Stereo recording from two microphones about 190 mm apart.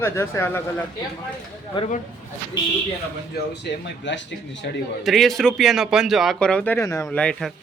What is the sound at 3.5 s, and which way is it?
Speech, 70° left (ahead or behind).